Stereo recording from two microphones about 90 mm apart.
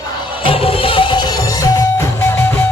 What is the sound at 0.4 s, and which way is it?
Music, 90° left.